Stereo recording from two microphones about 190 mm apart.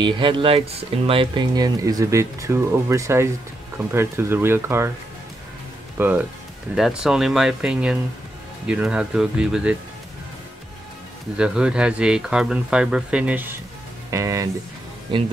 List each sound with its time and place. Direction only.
0.0 s speech: 25° right (ahead or behind)
5.9 s speech: 10° right (ahead or behind)
11.3 s speech: 5° right (ahead or behind)